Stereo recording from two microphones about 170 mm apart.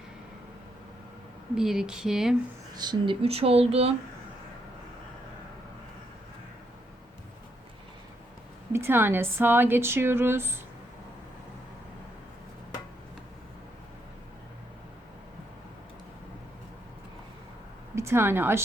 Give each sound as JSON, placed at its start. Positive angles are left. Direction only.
{"t": 1.5, "sound": "speech", "side_deg": -5}
{"t": 2.7, "sound": "speech", "side_deg": -25}
{"t": 8.7, "sound": "speech", "side_deg": -15}
{"t": 17.9, "sound": "speech", "side_deg": -15}